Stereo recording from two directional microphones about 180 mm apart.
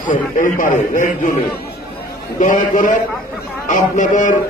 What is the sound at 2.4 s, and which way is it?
A man's voice, 45° left (ahead or behind).